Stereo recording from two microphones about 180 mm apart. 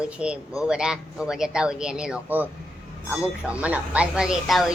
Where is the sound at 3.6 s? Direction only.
5° right (ahead or behind).